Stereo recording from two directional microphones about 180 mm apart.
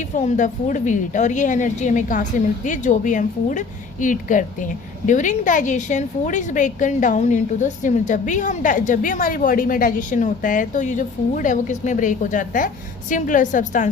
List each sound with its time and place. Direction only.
0.2 s a woman's voice: 45° left (ahead or behind)